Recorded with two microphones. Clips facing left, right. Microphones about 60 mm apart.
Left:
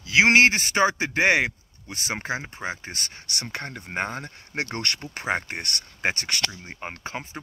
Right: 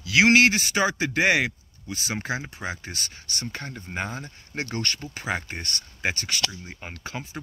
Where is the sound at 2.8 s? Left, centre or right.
Left.